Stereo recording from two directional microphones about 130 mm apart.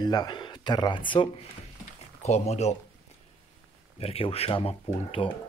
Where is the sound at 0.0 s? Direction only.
30° left (ahead or behind).